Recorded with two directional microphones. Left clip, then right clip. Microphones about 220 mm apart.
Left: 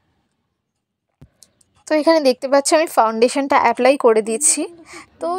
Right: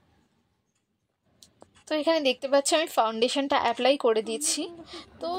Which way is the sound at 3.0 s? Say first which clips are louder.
Left 9 dB; 15° left (ahead or behind).